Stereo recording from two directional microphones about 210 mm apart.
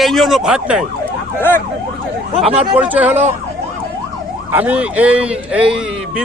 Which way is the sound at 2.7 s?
5° right (ahead or behind).